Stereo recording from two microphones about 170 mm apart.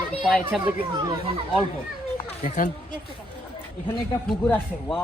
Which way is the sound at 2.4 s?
45° left (ahead or behind).